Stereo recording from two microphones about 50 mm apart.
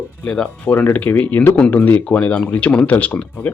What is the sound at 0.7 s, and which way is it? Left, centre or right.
Speech, left.